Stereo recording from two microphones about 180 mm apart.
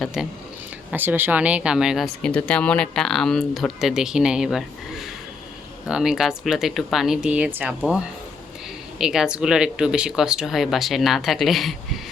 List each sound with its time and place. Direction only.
0.0 s speech: centre (ahead or behind)